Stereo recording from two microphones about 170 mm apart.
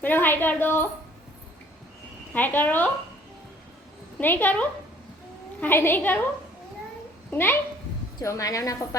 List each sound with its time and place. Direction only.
0.0 s a woman's voice: 10° left (ahead or behind)
2.3 s a woman's voice: 10° left (ahead or behind)
4.2 s a woman's voice: 10° left (ahead or behind)
7.3 s speech: 10° left (ahead or behind)